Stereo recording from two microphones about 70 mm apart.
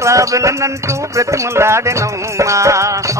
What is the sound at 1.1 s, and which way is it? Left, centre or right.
Music, right.